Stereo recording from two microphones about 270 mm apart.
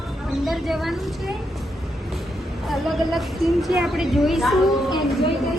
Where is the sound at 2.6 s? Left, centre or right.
Centre.